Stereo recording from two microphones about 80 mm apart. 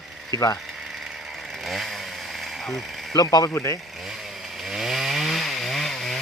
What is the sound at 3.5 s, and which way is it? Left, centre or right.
Speech, left.